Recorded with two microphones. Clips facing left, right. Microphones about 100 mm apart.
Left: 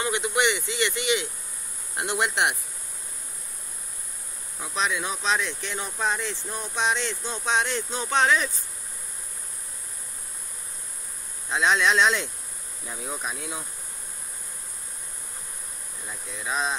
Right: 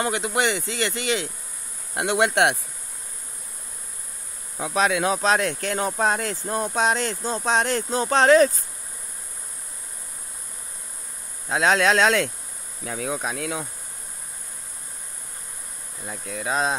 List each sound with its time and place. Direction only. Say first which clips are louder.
0.0 s speech: right 1 dB; 35° right (ahead or behind)
2.0 s speech: right 6 dB; 75° right (ahead or behind)
4.6 s speech: right 6 dB; 80° right
5.2 s speech: right 5 dB; 45° right (ahead or behind)
11.4 s speech: right 3 dB; 45° right (ahead or behind)
12.8 s speech: right 7 dB; 80° right
13.3 s insect: right 6 dB; 75° right (ahead or behind)
16.1 s speech: right 5 dB; 45° right (ahead or behind)